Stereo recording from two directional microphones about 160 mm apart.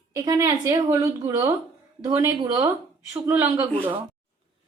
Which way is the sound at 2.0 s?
25° right (ahead or behind).